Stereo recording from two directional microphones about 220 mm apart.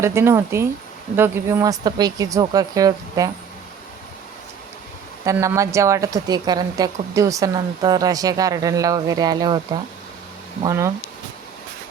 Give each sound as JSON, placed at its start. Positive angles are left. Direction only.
{"t": 0.0, "sound": "a woman's voice", "side_deg": -10}
{"t": 5.2, "sound": "a woman's voice", "side_deg": -15}
{"t": 10.6, "sound": "a woman's voice", "side_deg": -15}